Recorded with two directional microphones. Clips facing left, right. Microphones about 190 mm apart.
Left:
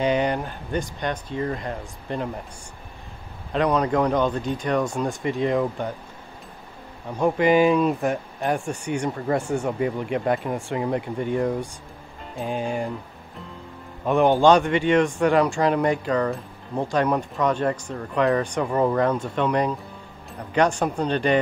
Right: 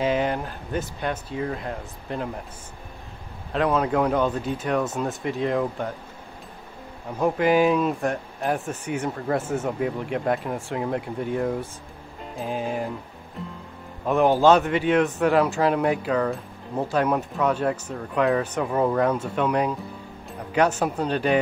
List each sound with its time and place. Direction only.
0.0 s a man's voice: centre (ahead or behind)
3.5 s a man's voice: centre (ahead or behind)
7.2 s a man's voice: centre (ahead or behind)
14.0 s a man's voice: centre (ahead or behind)